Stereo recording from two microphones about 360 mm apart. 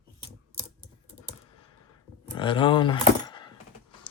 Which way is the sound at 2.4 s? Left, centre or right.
Centre.